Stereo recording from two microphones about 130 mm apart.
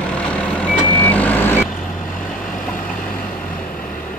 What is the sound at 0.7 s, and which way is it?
Vehicle, 15° left (ahead or behind).